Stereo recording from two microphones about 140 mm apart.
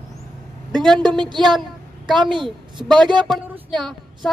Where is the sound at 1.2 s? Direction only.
30° right (ahead or behind).